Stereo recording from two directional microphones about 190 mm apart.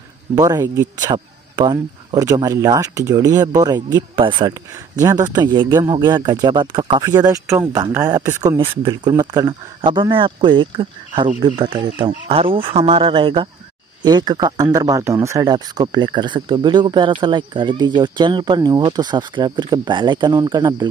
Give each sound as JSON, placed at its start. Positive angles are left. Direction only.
{"t": 0.4, "sound": "a man's voice", "side_deg": -20}